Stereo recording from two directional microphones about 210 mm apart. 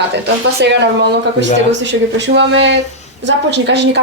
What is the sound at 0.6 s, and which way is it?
A woman's voice, 55° right (ahead or behind).